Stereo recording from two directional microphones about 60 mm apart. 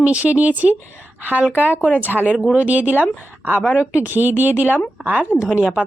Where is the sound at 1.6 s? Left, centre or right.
Right.